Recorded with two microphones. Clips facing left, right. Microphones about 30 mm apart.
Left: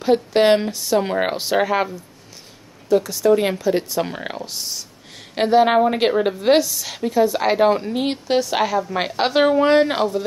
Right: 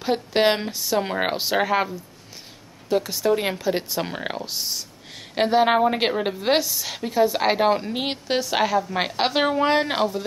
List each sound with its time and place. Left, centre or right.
0.0 s a woman's voice: centre
2.9 s speech: right
3.3 s a woman's voice: centre